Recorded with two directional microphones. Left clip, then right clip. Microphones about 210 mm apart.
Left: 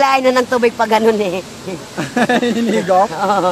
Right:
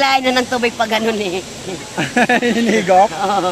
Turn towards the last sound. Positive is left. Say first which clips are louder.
# left 2 dB
turn(degrees=35)  # may be behind; listen again after turning